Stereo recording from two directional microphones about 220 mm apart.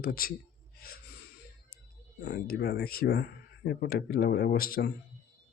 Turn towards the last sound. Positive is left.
turn(degrees=40)  # may be behind; listen again after turning